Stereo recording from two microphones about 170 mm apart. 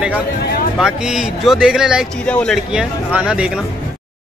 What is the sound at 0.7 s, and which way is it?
Speech, 5° right (ahead or behind).